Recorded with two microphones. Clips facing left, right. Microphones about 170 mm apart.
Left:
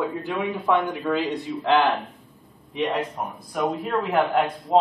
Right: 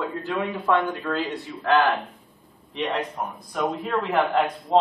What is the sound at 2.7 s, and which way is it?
A man's voice, centre (ahead or behind).